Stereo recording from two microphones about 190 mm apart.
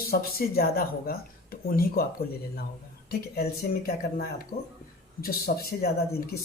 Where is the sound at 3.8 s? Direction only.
50° left (ahead or behind).